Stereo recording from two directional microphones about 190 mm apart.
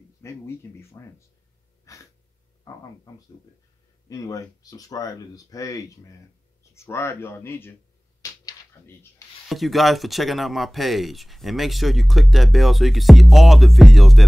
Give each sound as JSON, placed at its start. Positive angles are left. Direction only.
{"t": 0.2, "sound": "speech", "side_deg": 15}
{"t": 1.9, "sound": "speech", "side_deg": 15}
{"t": 8.2, "sound": "a sound", "side_deg": 15}
{"t": 9.5, "sound": "speech", "side_deg": 0}